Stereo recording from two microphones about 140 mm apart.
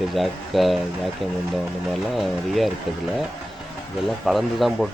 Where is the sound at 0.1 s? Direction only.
Centre (ahead or behind).